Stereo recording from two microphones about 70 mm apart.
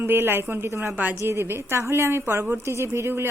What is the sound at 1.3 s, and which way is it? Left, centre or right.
A woman's voice, right.